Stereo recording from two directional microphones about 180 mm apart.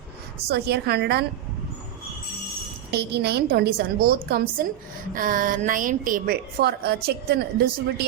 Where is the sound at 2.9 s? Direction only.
65° right (ahead or behind).